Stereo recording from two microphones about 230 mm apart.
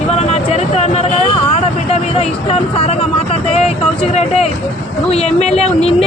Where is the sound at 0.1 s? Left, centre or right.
Left.